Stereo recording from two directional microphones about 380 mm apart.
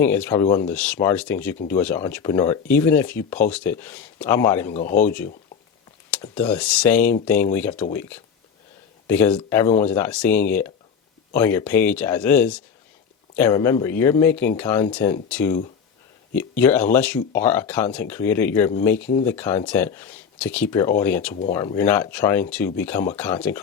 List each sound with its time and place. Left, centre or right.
0.0 s speech: centre
4.7 s speech: centre
4.9 s speech: centre
9.0 s speech: centre